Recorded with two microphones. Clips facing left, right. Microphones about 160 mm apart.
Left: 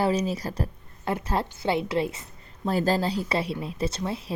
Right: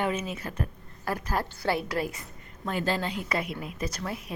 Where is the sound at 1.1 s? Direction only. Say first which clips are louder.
Left 3 dB; 25° left (ahead or behind).